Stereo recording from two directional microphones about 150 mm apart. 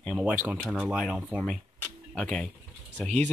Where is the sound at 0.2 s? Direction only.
10° right (ahead or behind).